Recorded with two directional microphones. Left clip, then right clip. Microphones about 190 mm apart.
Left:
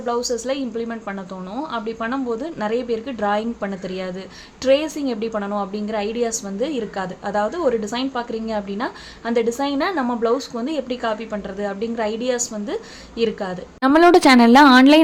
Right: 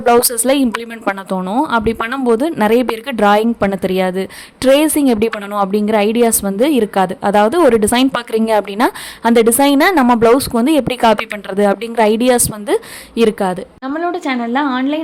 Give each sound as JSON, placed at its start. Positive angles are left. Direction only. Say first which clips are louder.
{"t": 0.0, "sound": "a woman's voice", "louder": "right 11 dB", "side_deg": -55}
{"t": 13.8, "sound": "a woman's voice", "louder": "left 7 dB", "side_deg": 30}